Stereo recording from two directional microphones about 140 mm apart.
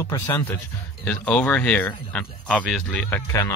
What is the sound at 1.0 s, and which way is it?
Speech, 10° left (ahead or behind).